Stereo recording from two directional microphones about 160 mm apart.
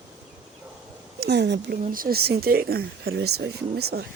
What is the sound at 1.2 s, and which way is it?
Speech, 90° right.